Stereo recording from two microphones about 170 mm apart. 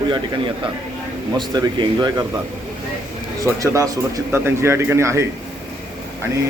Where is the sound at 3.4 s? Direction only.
20° right (ahead or behind).